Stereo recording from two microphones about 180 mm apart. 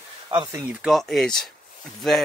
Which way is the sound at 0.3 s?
20° right (ahead or behind).